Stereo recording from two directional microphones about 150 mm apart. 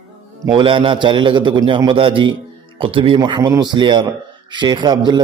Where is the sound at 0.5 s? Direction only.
35° right (ahead or behind).